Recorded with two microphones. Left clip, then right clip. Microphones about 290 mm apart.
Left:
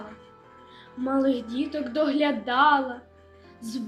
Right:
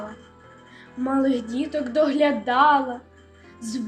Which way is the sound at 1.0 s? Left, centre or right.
Centre.